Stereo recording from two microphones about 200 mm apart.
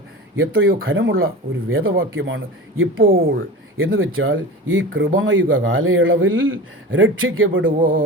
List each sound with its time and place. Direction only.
0.3 s speech: 85° right
3.0 s speech: 45° right (ahead or behind)
3.9 s speech: 80° right
7.8 s speech: 45° right (ahead or behind)